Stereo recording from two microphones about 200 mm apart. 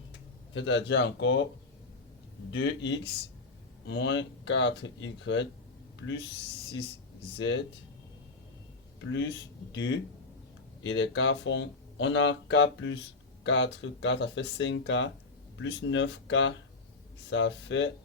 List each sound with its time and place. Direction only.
0.5 s speech: 65° left (ahead or behind)
2.5 s speech: 65° left (ahead or behind)
7.3 s speech: 65° left (ahead or behind)
9.0 s speech: 70° left (ahead or behind)